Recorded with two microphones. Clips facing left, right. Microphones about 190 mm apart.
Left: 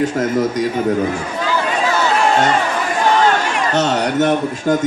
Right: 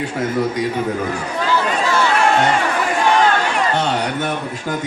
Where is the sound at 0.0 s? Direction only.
45° left (ahead or behind).